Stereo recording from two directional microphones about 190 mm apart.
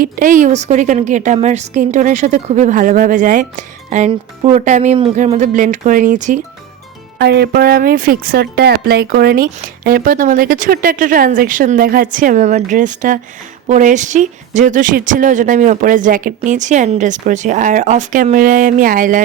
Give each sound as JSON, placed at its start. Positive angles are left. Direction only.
{"t": 0.0, "sound": "a woman's voice", "side_deg": -45}
{"t": 7.2, "sound": "a woman's voice", "side_deg": -60}